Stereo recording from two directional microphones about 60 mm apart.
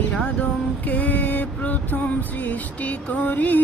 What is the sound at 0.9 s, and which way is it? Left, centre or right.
Music, left.